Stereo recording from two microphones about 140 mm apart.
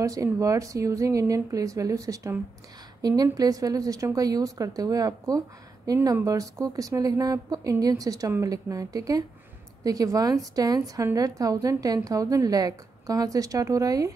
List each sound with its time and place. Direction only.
0.0 s a woman's voice: 25° right (ahead or behind)